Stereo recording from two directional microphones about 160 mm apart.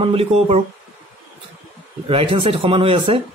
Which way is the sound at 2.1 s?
35° right (ahead or behind).